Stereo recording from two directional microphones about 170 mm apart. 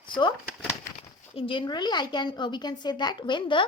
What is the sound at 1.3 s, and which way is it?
A woman's voice, 30° left (ahead or behind).